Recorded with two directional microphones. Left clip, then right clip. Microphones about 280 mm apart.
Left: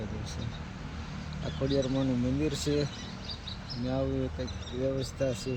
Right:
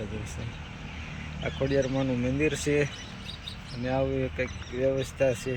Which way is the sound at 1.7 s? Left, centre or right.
Centre.